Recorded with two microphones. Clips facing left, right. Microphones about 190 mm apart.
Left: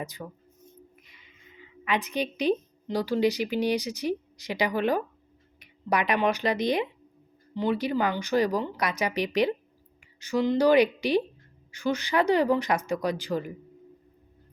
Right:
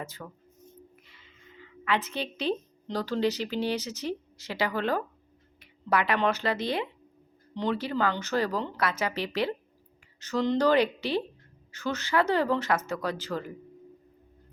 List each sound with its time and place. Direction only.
0.0 s speech: 15° left (ahead or behind)
1.0 s a sound: 15° left (ahead or behind)
2.8 s speech: 10° left (ahead or behind)